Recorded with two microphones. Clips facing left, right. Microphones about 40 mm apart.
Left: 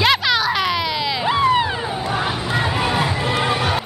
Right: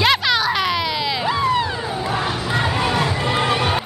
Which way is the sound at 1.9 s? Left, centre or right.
Centre.